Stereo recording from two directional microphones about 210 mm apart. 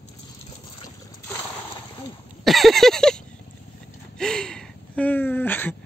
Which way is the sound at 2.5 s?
Centre (ahead or behind).